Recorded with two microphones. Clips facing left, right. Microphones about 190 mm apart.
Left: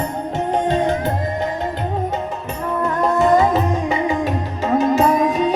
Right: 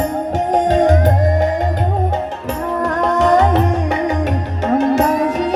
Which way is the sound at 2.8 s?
80° right.